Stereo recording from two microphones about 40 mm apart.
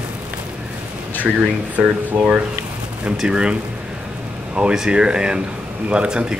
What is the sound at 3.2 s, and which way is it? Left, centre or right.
Speech, right.